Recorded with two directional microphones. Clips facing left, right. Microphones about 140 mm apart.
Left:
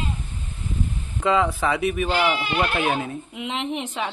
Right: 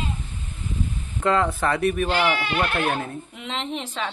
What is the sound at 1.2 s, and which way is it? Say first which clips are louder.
Speech: left 1 dB; 5° left (ahead or behind).